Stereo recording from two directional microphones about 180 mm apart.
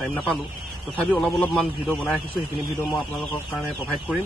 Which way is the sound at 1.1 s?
Centre (ahead or behind).